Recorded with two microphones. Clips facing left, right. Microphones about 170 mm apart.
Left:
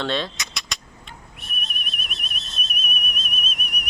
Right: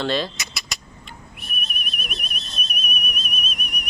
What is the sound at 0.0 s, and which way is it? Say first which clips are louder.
Vehicle: right 2 dB; centre (ahead or behind).